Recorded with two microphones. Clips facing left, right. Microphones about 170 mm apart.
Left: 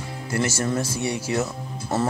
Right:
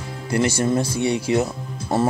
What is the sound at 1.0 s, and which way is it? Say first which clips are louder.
Speech: right 5 dB; 20° right (ahead or behind).